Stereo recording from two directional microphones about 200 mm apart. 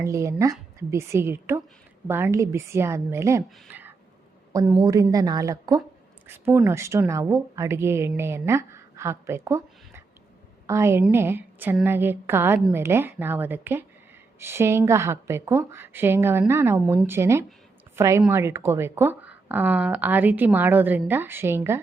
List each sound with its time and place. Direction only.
0.0 s a woman's voice: 15° right (ahead or behind)